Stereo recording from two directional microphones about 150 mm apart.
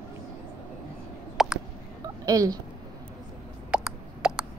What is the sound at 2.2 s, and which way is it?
Speech, 25° right (ahead or behind).